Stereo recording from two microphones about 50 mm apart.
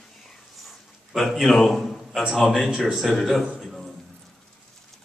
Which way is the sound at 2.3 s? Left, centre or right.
Centre.